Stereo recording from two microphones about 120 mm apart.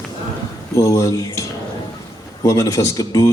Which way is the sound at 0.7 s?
25° left (ahead or behind).